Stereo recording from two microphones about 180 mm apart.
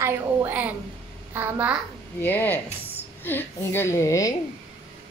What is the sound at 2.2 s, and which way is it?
Speech, 10° left (ahead or behind).